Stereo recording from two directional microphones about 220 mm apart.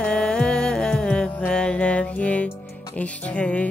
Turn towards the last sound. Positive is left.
turn(degrees=5)  # may be behind; listen again after turning